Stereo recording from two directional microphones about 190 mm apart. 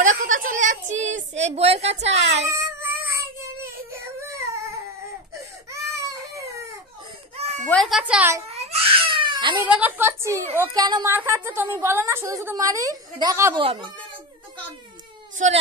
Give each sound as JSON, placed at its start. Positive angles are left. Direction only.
{"t": 0.0, "sound": "a sound", "side_deg": -40}
{"t": 2.5, "sound": "baby cry", "side_deg": -15}
{"t": 5.7, "sound": "baby cry", "side_deg": -15}
{"t": 7.6, "sound": "speech", "side_deg": 5}
{"t": 8.5, "sound": "crying", "side_deg": -35}
{"t": 9.6, "sound": "a woman's voice", "side_deg": -10}
{"t": 13.6, "sound": "speech", "side_deg": -25}